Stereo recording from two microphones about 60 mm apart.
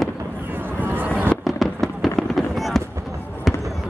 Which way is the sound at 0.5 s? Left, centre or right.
Right.